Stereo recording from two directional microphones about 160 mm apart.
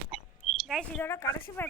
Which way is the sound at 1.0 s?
15° left (ahead or behind).